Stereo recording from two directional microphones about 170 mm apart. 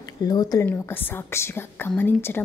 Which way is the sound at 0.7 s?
10° left (ahead or behind).